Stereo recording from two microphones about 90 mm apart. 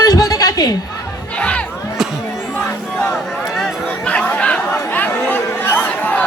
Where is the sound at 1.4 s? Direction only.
15° left (ahead or behind).